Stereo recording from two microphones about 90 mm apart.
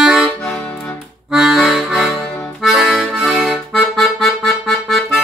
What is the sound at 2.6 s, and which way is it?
Accordion, 5° right (ahead or behind).